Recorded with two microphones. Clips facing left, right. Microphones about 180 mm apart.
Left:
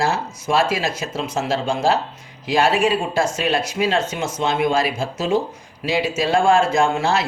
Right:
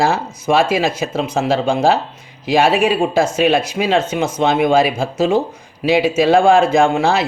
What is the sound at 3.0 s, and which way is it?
Speech, 55° right (ahead or behind).